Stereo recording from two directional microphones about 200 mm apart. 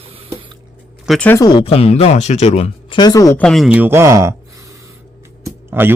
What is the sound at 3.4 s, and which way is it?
Speech, centre (ahead or behind).